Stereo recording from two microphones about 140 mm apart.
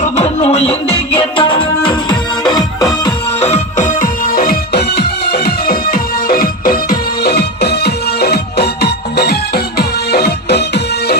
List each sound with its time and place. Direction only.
0.0 s music: 50° left (ahead or behind); by 3.1 s 30° left (ahead or behind)
3.4 s music: 55° left (ahead or behind); by 7.0 s 90° left